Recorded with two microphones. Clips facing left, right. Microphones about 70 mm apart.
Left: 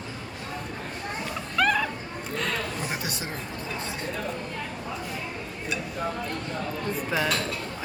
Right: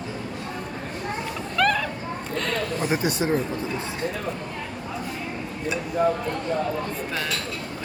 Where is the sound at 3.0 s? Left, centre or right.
Right.